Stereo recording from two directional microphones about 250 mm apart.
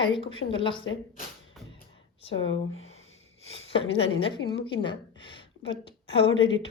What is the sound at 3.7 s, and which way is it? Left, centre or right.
A woman's voice, left.